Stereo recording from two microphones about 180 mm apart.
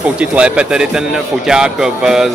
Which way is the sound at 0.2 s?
5° right (ahead or behind).